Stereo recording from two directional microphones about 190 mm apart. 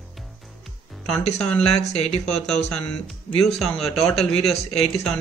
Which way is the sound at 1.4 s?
5° left (ahead or behind).